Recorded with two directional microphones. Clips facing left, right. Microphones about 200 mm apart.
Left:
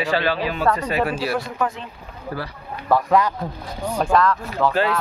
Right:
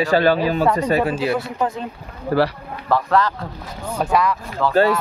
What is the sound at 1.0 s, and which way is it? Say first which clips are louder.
Speech: right 3 dB; 20° right (ahead or behind).